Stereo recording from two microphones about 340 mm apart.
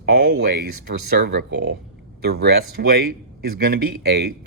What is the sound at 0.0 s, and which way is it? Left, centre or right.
Speech, right.